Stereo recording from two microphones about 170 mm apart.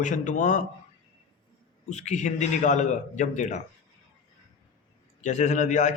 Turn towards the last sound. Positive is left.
turn(degrees=45)  # may be behind; listen again after turning